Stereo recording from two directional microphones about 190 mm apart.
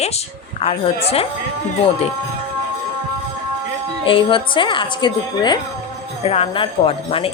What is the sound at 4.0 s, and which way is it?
A woman's voice, 25° left (ahead or behind).